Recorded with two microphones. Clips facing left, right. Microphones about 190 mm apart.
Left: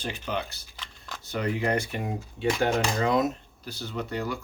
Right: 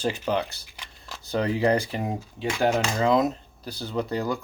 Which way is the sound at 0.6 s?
15° right (ahead or behind).